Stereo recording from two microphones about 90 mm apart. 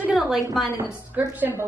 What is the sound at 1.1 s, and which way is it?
Speech, 20° right (ahead or behind).